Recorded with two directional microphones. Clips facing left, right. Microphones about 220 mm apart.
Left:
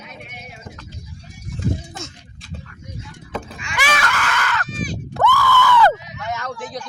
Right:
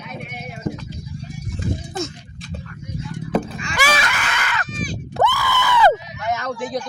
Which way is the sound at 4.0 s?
20° right (ahead or behind).